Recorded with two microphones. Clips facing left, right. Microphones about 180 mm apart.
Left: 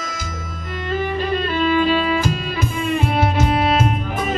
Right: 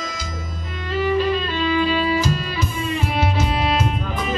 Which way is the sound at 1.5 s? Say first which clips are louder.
Left 3 dB; 50° left (ahead or behind).